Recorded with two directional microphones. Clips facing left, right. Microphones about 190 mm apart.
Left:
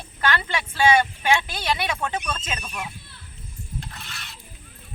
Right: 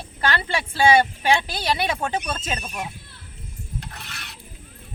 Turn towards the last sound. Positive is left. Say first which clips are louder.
# right 1 dB
turn(degrees=-60)  # may be behind; listen again after turning